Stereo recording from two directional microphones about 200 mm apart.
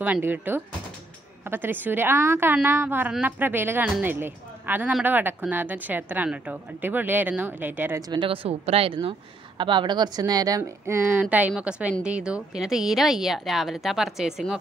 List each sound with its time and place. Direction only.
0.0 s a woman's voice: 10° right (ahead or behind)
8.1 s a woman's voice: 25° right (ahead or behind); by 14.6 s 5° right (ahead or behind)